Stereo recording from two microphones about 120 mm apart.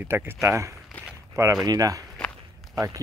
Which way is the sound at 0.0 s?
20° right (ahead or behind).